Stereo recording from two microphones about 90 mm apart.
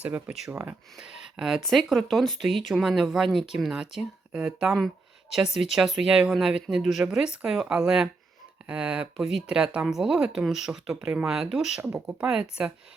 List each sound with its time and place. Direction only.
0.0 s speech: 15° right (ahead or behind)
11.8 s speech: 25° right (ahead or behind)
12.2 s speech: 10° right (ahead or behind)